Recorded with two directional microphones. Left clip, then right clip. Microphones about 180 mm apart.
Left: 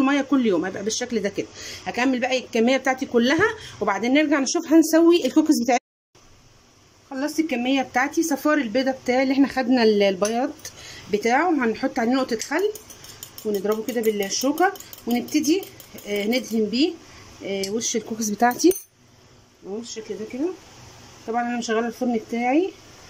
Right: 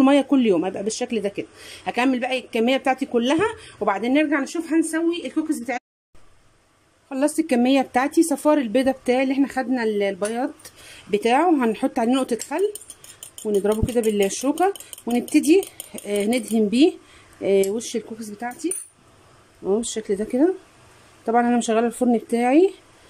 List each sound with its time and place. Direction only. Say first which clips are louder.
0.0 s speech: right 3 dB; 20° right (ahead or behind); by 4.4 s centre (ahead or behind)
4.4 s a woman's voice: left 4 dB; 20° left (ahead or behind)
7.1 s speech: right 4 dB; 20° right (ahead or behind); by 10.5 s 5° left (ahead or behind)
11.1 s speech: right 2 dB; 15° right (ahead or behind)
18.2 s a woman's voice: left 10 dB; 20° left (ahead or behind)
19.6 s speech: right 10 dB; 30° right (ahead or behind)
21.3 s speech: right 5 dB; 25° right (ahead or behind)